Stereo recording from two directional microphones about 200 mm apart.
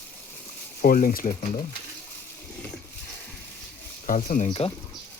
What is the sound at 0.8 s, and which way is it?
Speech, 45° left (ahead or behind).